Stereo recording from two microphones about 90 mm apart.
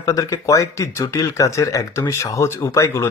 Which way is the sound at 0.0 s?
35° left (ahead or behind).